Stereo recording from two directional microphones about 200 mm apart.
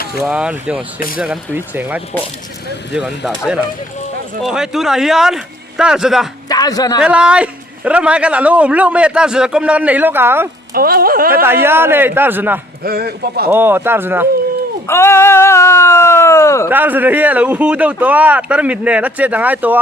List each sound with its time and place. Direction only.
0.2 s speech: 5° right (ahead or behind)
0.9 s speech: 45° left (ahead or behind)
1.2 s a man's voice: 5° right (ahead or behind)
6.5 s a man's voice: 20° left (ahead or behind)
7.0 s a man's voice: 5° right (ahead or behind)
10.8 s speech: 45° right (ahead or behind)
11.4 s a man's voice: 10° right (ahead or behind)
12.8 s speech: 50° right (ahead or behind)
13.5 s a man's voice: 10° right (ahead or behind)
14.8 s speech: 10° left (ahead or behind)
16.6 s a man's voice: 10° right (ahead or behind)